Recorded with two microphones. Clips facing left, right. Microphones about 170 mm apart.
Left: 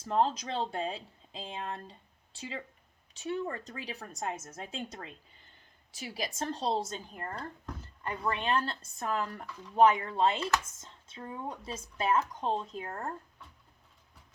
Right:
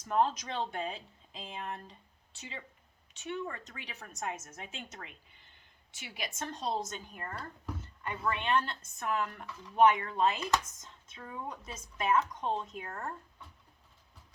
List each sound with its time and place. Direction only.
0.0 s speech: 30° left (ahead or behind)
8.3 s speech: 35° left (ahead or behind)